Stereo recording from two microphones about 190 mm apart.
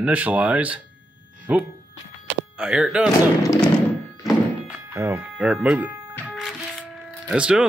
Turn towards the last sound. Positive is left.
turn(degrees=-5)  # may be behind; listen again after turning